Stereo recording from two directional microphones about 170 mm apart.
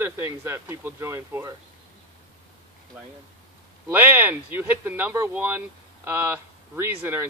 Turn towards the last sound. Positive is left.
turn(degrees=-15)  # may be behind; listen again after turning